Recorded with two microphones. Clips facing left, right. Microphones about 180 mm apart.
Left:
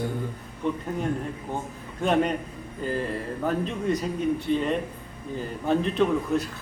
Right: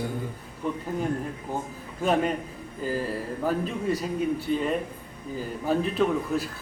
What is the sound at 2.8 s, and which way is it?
Speech, 5° right (ahead or behind).